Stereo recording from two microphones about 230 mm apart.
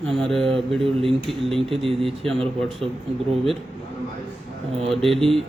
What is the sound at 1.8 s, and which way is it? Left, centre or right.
Speech, centre.